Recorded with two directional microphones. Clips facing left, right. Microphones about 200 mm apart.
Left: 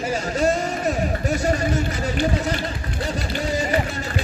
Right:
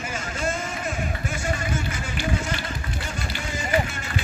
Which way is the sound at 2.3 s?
35° left (ahead or behind).